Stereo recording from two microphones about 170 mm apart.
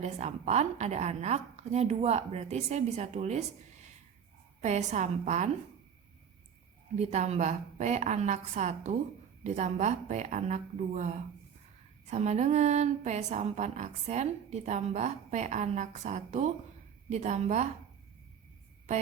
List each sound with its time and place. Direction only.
0.0 s a woman's voice: 40° right (ahead or behind)
7.0 s a woman's voice: 40° right (ahead or behind)